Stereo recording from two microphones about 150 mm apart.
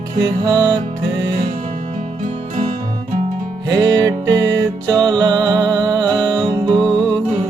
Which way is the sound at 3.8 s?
20° right (ahead or behind).